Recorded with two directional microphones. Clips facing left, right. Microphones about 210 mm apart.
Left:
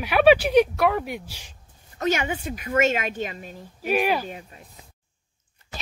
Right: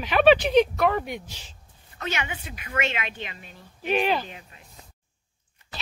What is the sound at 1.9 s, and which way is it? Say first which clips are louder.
A woman's voice: left 7 dB; 45° left (ahead or behind).